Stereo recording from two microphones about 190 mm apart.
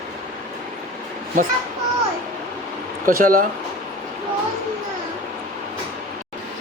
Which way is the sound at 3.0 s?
45° right (ahead or behind).